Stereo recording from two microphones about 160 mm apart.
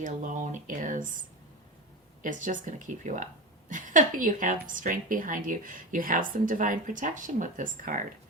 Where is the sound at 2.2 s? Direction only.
55° right (ahead or behind).